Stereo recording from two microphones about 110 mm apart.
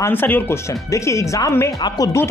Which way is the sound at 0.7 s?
30° left (ahead or behind).